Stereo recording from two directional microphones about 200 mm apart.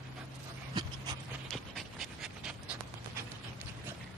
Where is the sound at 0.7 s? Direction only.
20° right (ahead or behind).